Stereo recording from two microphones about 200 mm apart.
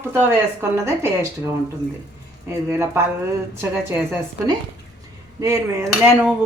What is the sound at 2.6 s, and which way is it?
Speech, 10° right (ahead or behind).